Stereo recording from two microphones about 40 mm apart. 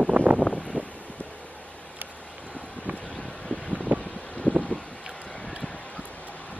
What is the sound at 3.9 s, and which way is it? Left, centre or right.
Wind noise, left.